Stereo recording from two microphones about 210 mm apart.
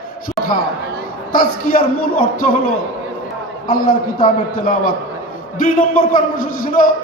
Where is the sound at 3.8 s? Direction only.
40° left (ahead or behind).